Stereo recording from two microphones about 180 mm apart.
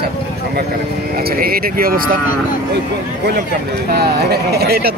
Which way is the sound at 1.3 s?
55° right (ahead or behind).